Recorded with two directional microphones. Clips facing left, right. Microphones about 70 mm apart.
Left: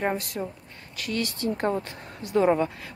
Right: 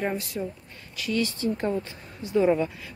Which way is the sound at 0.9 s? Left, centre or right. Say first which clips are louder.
Right 3 dB; left.